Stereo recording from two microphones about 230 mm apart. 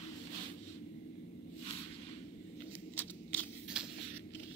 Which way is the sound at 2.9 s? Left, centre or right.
Centre.